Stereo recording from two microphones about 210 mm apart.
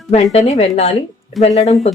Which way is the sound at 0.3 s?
30° left (ahead or behind).